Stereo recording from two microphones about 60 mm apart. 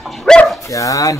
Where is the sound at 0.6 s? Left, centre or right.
Left.